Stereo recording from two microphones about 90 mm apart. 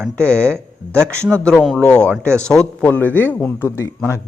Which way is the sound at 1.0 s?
30° right (ahead or behind).